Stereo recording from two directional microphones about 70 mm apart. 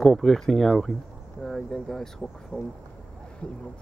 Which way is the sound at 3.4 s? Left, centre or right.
Centre.